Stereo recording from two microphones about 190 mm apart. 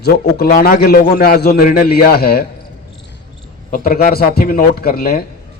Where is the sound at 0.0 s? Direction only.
55° left (ahead or behind).